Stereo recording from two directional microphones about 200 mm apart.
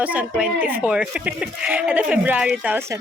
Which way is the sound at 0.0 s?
5° right (ahead or behind).